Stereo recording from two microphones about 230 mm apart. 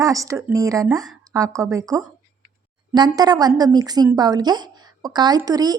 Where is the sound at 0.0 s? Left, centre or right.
Centre.